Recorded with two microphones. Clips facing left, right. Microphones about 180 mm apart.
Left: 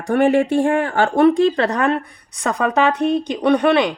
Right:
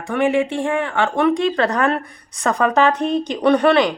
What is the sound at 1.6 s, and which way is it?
Speech, 20° left (ahead or behind).